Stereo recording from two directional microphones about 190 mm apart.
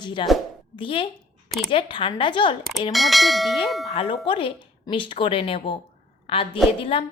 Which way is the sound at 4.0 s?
25° left (ahead or behind).